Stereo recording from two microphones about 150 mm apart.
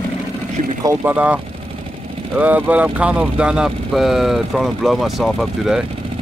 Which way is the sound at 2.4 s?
10° right (ahead or behind).